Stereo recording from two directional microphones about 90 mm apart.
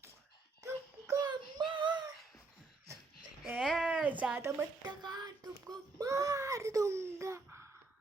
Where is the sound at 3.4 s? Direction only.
10° right (ahead or behind).